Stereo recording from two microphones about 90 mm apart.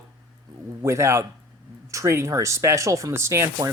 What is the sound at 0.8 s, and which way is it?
Speech, 30° right (ahead or behind).